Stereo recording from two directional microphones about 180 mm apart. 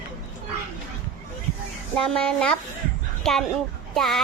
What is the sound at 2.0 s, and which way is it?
Child singing, 5° left (ahead or behind).